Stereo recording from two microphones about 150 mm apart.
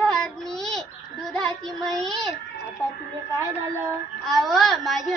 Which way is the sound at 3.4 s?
20° right (ahead or behind).